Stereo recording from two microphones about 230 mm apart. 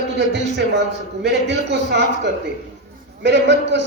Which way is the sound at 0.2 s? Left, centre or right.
Right.